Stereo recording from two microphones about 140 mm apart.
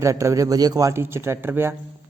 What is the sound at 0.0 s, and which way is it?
Speech, 20° right (ahead or behind).